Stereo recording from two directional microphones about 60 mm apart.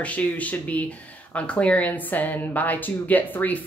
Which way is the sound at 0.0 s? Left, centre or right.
Left.